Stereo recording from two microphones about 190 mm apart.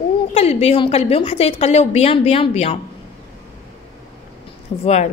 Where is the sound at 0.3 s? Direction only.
30° left (ahead or behind).